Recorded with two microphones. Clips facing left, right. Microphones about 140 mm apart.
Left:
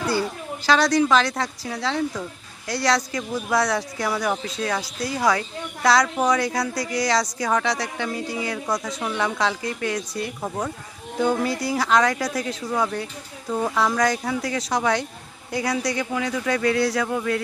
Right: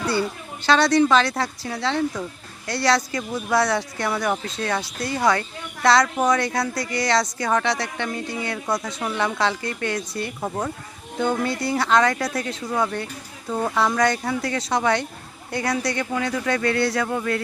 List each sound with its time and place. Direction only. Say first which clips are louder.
0.1 s speech: even; centre (ahead or behind)